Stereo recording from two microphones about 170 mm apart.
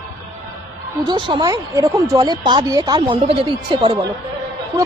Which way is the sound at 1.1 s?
25° right (ahead or behind).